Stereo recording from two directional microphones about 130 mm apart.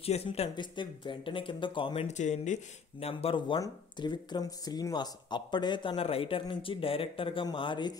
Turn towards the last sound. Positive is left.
turn(degrees=40)  # may be behind; listen again after turning